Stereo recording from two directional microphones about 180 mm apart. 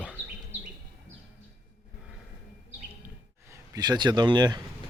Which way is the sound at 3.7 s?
25° right (ahead or behind).